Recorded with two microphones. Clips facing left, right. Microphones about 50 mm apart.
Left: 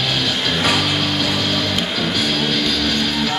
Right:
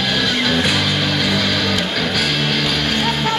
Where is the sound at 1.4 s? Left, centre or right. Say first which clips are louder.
Right 2 dB; right.